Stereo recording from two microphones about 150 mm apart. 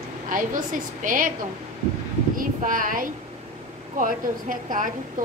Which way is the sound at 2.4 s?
65° right (ahead or behind).